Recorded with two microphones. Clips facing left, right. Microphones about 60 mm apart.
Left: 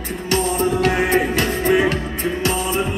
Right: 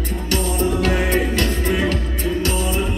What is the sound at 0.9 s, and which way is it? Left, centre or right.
Music, centre.